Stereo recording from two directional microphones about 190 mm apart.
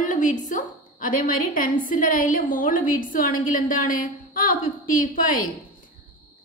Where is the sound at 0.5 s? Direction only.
45° left (ahead or behind).